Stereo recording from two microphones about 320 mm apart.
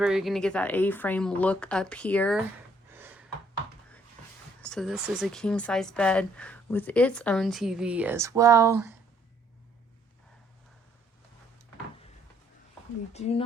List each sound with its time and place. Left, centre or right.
0.0 s speech: centre
2.9 s gasp: centre
4.6 s speech: centre
13.1 s speech: centre